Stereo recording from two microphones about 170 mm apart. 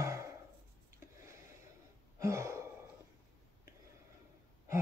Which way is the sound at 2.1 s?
15° right (ahead or behind).